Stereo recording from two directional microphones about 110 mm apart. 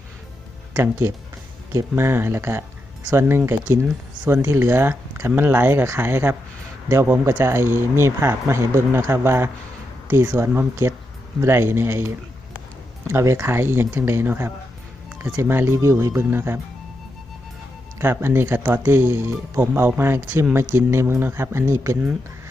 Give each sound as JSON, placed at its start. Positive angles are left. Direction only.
{"t": 0.8, "sound": "speech", "side_deg": -25}
{"t": 3.2, "sound": "speech", "side_deg": -20}
{"t": 18.0, "sound": "speech", "side_deg": -20}